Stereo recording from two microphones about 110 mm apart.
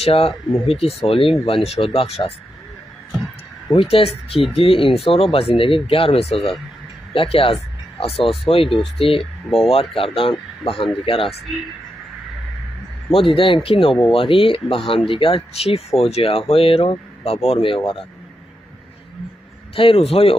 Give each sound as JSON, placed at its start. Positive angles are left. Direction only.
{"t": 0.0, "sound": "speech", "side_deg": 60}
{"t": 3.9, "sound": "speech", "side_deg": 60}
{"t": 9.2, "sound": "speech", "side_deg": 0}
{"t": 9.7, "sound": "speech", "side_deg": 55}
{"t": 13.1, "sound": "speech", "side_deg": 55}
{"t": 19.7, "sound": "speech", "side_deg": 55}